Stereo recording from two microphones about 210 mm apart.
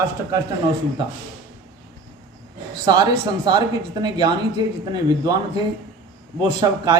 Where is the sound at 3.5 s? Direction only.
20° right (ahead or behind).